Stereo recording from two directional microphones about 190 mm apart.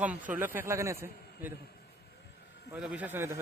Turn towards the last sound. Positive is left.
turn(degrees=-10)  # may be behind; listen again after turning